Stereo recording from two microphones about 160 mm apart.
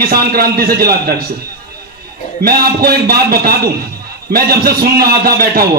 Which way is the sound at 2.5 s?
70° right (ahead or behind).